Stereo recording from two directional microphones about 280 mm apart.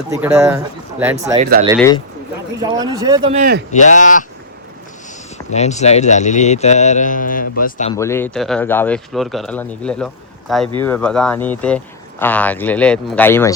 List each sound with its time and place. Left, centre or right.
0.1 s speech: centre
1.4 s a man's voice: right
2.6 s speech: centre
3.3 s a man's voice: right
3.7 s speech: left
5.5 s speech: left
7.9 s speech: centre